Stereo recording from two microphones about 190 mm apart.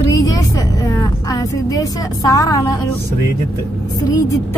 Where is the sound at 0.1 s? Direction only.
20° left (ahead or behind).